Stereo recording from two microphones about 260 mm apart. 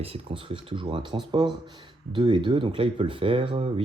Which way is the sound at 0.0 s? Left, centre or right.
Right.